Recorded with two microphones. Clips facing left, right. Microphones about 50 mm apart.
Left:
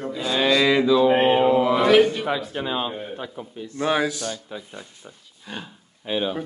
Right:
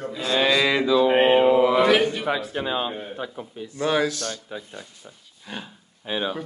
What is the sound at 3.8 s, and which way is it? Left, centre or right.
Speech, centre.